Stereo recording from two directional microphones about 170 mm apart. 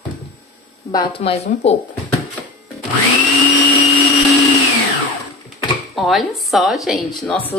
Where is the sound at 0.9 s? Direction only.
30° left (ahead or behind).